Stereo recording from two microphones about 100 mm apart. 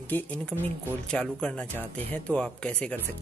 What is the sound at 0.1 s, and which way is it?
Speech, 20° left (ahead or behind).